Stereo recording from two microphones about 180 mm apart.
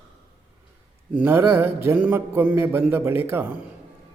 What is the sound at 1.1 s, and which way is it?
A man's voice, 10° right (ahead or behind).